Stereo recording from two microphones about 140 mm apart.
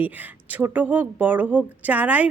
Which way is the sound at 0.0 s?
10° right (ahead or behind).